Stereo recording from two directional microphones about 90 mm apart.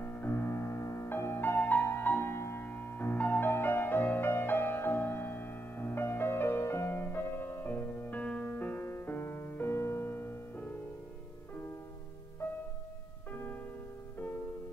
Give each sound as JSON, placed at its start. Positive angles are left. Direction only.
{"t": 0.0, "sound": "music", "side_deg": 25}
{"t": 13.3, "sound": "music", "side_deg": 20}